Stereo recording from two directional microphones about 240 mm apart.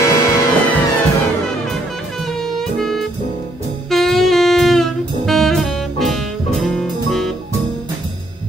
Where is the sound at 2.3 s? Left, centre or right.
Centre.